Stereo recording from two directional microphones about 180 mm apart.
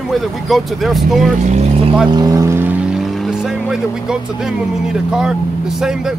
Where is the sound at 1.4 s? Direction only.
40° right (ahead or behind).